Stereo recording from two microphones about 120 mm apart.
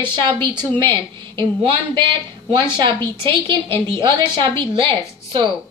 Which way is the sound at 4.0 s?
40° right (ahead or behind).